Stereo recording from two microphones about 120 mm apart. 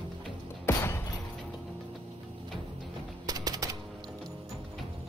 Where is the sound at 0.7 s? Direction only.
20° left (ahead or behind).